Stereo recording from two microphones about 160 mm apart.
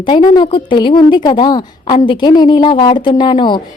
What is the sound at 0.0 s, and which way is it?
A woman's voice, 30° left (ahead or behind).